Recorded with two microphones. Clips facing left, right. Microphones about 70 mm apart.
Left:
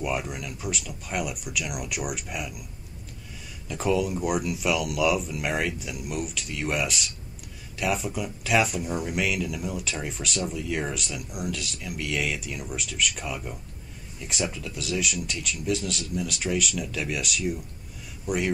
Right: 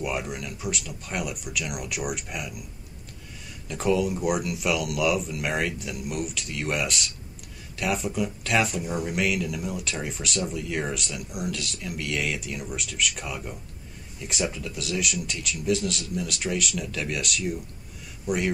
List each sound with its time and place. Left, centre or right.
0.0 s speech: centre
3.6 s a man's voice: centre